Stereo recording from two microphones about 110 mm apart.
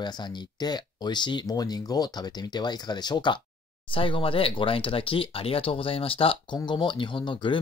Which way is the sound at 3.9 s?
55° left (ahead or behind).